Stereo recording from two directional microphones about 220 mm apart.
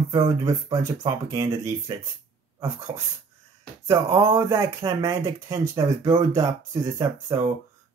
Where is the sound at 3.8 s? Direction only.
10° right (ahead or behind).